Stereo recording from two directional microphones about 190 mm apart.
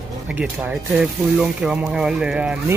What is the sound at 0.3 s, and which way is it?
Speech, 5° right (ahead or behind).